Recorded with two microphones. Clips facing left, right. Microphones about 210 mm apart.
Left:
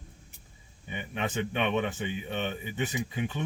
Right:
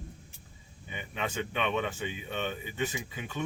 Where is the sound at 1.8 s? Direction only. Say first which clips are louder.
Left 3 dB; 20° left (ahead or behind).